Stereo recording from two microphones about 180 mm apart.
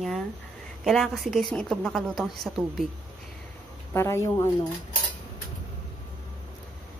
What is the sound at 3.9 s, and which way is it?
Speech, 15° left (ahead or behind).